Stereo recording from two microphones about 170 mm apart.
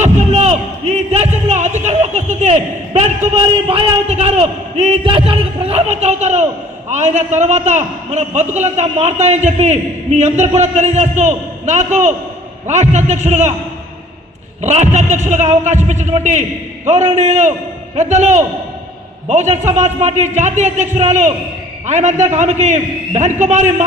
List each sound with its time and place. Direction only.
0.0 s a sound: 40° right (ahead or behind)
6.9 s a man's voice: 45° right (ahead or behind)
14.6 s a man's voice: 40° right (ahead or behind)